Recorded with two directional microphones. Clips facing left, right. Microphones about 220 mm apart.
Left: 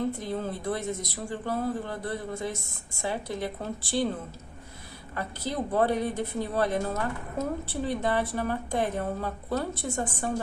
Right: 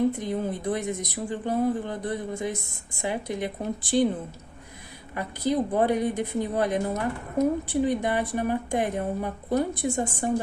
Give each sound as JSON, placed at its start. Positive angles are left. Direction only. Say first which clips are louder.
{"t": 0.1, "sound": "a woman's voice", "louder": "right 3 dB", "side_deg": -15}
{"t": 5.1, "sound": "a woman's voice", "louder": "right 6 dB", "side_deg": -15}